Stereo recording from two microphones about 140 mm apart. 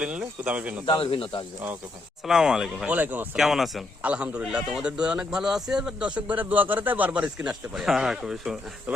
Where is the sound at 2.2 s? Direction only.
5° right (ahead or behind).